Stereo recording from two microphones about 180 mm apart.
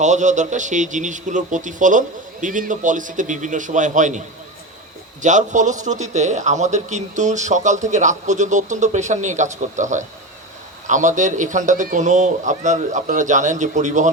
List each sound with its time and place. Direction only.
0.0 s a man's voice: 40° right (ahead or behind)
5.2 s a man's voice: 45° right (ahead or behind)